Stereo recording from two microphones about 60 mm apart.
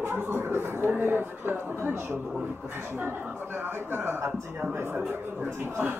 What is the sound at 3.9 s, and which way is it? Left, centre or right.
Speech, right.